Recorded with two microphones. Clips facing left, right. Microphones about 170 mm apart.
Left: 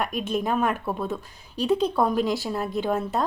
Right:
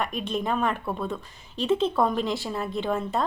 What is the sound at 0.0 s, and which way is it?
Speech, 5° left (ahead or behind).